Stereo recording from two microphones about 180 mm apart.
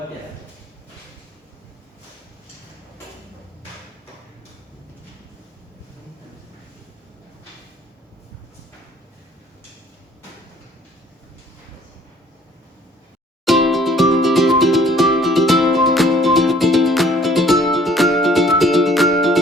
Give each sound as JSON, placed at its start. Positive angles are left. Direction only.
{"t": 13.4, "sound": "music", "side_deg": 0}